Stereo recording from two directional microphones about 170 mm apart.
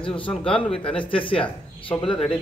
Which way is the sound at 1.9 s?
30° left (ahead or behind).